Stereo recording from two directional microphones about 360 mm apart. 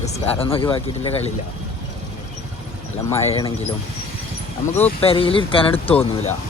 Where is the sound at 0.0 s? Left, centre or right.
Centre.